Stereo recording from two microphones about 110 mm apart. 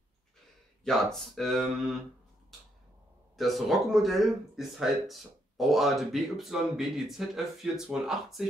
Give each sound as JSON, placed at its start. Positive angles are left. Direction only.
{"t": 0.8, "sound": "speech", "side_deg": 5}
{"t": 3.3, "sound": "speech", "side_deg": 0}